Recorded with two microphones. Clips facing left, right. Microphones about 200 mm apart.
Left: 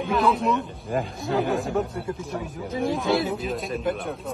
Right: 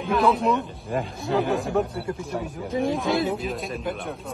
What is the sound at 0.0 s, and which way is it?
Speech, centre (ahead or behind).